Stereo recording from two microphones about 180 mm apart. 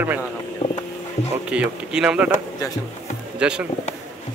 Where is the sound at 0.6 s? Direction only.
40° left (ahead or behind).